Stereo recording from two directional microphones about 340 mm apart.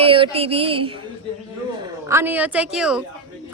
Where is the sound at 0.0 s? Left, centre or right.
Centre.